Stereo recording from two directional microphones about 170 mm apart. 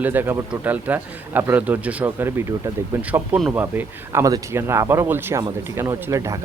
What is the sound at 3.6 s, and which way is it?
Speech, 15° right (ahead or behind).